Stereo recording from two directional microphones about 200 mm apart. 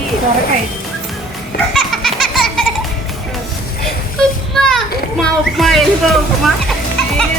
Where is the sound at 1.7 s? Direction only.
Centre (ahead or behind).